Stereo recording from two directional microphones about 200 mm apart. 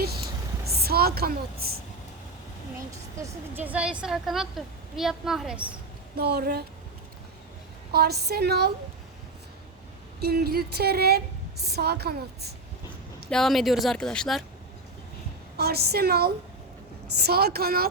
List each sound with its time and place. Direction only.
0.7 s a woman's voice: 50° right (ahead or behind)
3.2 s a woman's voice: 10° right (ahead or behind)
6.1 s a woman's voice: 55° right (ahead or behind)
7.9 s a woman's voice: 55° right (ahead or behind)
10.2 s a woman's voice: 50° right (ahead or behind)
13.3 s a woman's voice: centre (ahead or behind)
15.5 s a woman's voice: 55° right (ahead or behind)